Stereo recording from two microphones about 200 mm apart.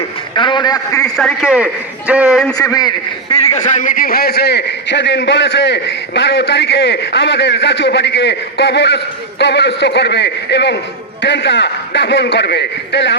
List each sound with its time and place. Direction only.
0.3 s a man's voice: 25° left (ahead or behind)
1.0 s a man's voice: 5° left (ahead or behind)
2.6 s a man's voice: 20° left (ahead or behind)
3.5 s a man's voice: 35° left (ahead or behind); by 13.1 s 60° left (ahead or behind)